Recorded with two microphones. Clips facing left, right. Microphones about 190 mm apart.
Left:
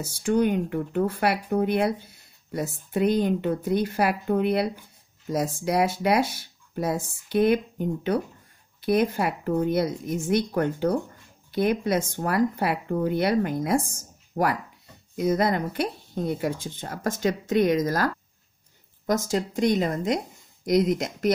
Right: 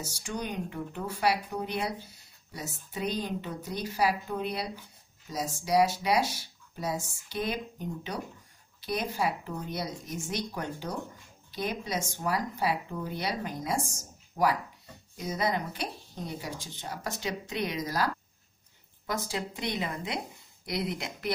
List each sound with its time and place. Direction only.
0.0 s speech: 55° left (ahead or behind)